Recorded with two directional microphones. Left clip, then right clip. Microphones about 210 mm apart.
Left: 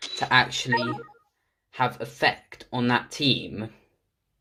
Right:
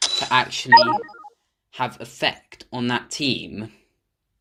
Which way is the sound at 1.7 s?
30° right (ahead or behind).